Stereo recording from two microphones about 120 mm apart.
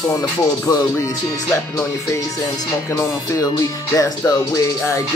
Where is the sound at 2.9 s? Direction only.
25° left (ahead or behind).